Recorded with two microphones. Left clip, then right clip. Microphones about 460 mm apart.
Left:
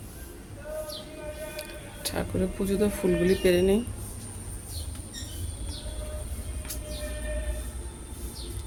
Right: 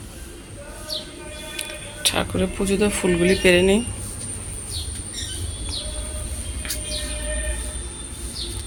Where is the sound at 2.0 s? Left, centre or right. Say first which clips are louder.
Right 8 dB; left.